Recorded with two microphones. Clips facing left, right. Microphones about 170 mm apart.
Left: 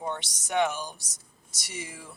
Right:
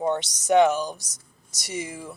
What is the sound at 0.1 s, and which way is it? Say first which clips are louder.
Speech: right 11 dB; 45° right (ahead or behind).